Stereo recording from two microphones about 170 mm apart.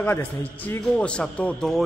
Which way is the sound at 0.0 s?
10° left (ahead or behind).